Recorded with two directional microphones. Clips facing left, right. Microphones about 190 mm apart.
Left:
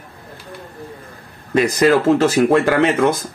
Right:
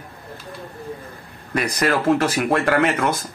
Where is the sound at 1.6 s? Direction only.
25° left (ahead or behind).